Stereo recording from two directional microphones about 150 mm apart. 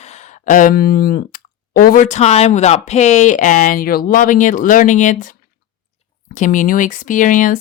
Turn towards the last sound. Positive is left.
turn(degrees=60)  # may be behind; listen again after turning